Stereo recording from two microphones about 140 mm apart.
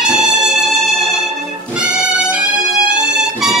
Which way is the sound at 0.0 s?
5° right (ahead or behind).